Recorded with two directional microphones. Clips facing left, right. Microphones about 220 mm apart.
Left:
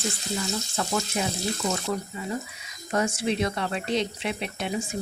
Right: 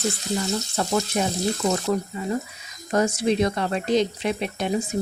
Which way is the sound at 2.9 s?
40° right (ahead or behind).